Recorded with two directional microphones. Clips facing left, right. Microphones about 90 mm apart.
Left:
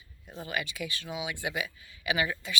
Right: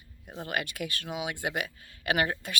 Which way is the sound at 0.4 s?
55° right (ahead or behind).